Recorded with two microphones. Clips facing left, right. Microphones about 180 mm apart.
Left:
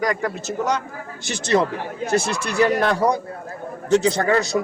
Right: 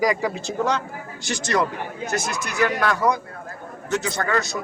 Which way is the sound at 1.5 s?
25° left (ahead or behind).